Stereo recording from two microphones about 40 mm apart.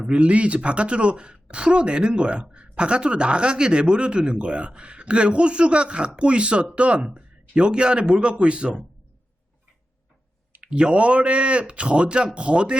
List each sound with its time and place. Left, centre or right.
0.1 s speech: right
10.6 s speech: right